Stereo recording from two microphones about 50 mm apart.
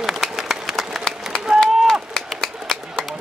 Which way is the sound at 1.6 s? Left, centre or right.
Centre.